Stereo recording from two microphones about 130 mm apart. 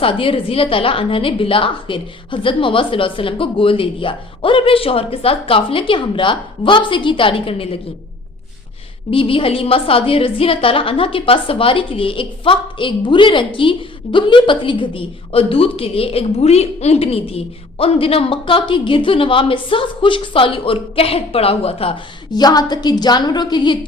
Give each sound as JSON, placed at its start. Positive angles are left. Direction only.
{"t": 0.0, "sound": "a woman's voice", "side_deg": 45}
{"t": 9.0, "sound": "a woman's voice", "side_deg": 45}
{"t": 22.3, "sound": "a woman's voice", "side_deg": 30}